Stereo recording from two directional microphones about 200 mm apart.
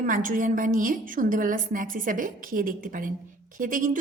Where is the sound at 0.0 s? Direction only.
40° right (ahead or behind).